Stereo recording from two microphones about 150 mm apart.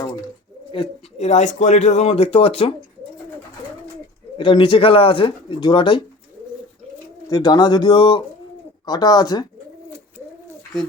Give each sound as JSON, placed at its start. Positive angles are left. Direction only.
{"t": 0.7, "sound": "speech", "side_deg": 35}
{"t": 1.3, "sound": "speech", "side_deg": 50}
{"t": 4.4, "sound": "speech", "side_deg": 35}
{"t": 7.3, "sound": "speech", "side_deg": 25}